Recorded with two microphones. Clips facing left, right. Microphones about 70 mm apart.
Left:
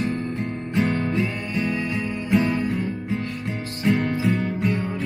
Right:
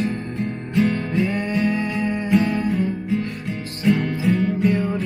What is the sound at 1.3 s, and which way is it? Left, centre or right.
Music, right.